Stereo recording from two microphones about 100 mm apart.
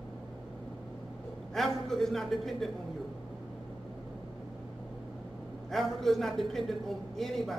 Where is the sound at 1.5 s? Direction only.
Centre (ahead or behind).